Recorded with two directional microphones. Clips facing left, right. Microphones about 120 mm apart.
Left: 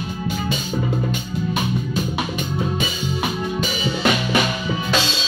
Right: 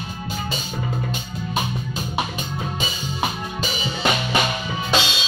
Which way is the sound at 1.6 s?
25° right (ahead or behind).